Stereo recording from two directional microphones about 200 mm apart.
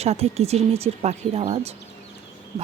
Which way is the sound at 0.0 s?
30° right (ahead or behind).